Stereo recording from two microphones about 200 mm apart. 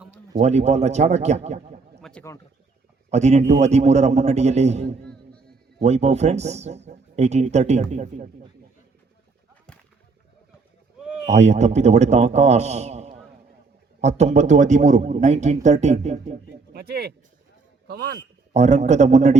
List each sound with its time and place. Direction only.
0.3 s speech: 35° right (ahead or behind)
2.0 s a sound: centre (ahead or behind)
3.1 s speech: 35° right (ahead or behind)
5.0 s music: 5° left (ahead or behind)
5.8 s speech: 35° right (ahead or behind)
11.3 s speech: 35° right (ahead or behind)
16.7 s a man's voice: 55° right (ahead or behind)
18.5 s speech: 35° right (ahead or behind)